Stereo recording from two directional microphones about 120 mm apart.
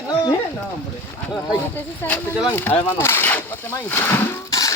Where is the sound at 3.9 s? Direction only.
20° left (ahead or behind).